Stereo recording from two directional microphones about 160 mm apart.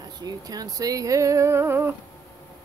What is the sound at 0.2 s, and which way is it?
Speech, 25° right (ahead or behind).